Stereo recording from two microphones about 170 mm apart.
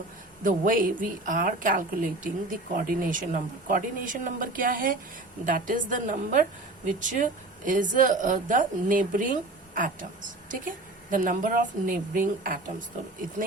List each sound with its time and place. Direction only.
0.4 s a woman's voice: 50° right (ahead or behind)